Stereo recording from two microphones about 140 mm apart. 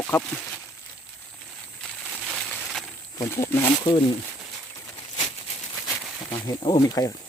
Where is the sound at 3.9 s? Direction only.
35° left (ahead or behind).